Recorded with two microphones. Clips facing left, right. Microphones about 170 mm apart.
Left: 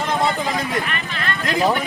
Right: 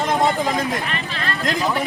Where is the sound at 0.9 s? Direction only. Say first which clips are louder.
Even; 35° right (ahead or behind).